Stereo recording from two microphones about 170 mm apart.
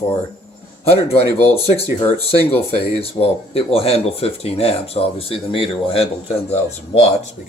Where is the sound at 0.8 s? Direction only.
35° left (ahead or behind).